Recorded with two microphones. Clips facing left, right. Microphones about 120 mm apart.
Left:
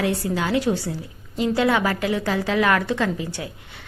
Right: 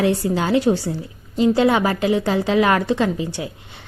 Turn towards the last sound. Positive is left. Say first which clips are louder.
# right 4 dB
turn(degrees=-20)  # may be behind; listen again after turning